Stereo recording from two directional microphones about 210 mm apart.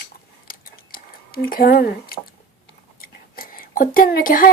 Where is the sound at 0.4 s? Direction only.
45° left (ahead or behind).